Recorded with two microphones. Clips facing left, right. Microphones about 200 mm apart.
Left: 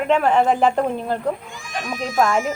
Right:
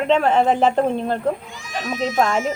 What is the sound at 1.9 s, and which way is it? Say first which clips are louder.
Speech: even; 25° right (ahead or behind).